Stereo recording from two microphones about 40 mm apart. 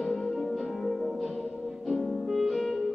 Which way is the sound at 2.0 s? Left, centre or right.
Centre.